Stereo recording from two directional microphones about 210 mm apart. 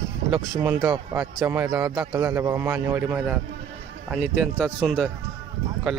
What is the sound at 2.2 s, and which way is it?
A man's voice, 10° right (ahead or behind).